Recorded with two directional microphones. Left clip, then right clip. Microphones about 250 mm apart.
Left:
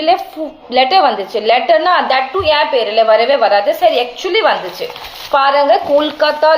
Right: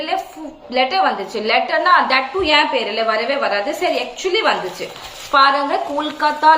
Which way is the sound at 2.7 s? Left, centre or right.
Left.